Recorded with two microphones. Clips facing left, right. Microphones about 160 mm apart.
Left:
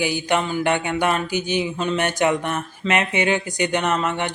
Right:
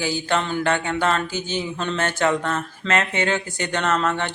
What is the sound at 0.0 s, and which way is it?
Speech, 15° left (ahead or behind).